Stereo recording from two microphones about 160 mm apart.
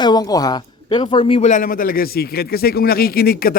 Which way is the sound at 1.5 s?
55° left (ahead or behind).